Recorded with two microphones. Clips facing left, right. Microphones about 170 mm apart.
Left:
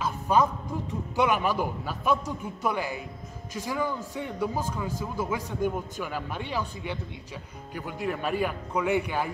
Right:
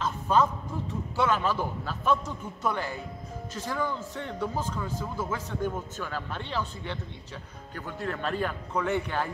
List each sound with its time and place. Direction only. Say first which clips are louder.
0.0 s music: left 1 dB; 10° left (ahead or behind)
1.1 s a man's voice: left 2 dB; 15° left (ahead or behind)